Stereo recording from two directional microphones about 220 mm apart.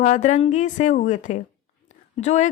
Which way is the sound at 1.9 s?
30° left (ahead or behind).